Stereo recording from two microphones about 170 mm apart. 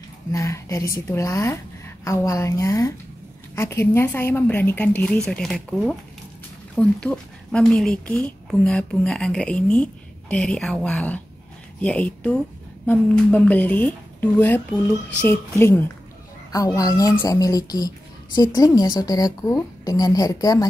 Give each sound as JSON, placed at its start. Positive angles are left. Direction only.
{"t": 0.3, "sound": "a woman's voice", "side_deg": 15}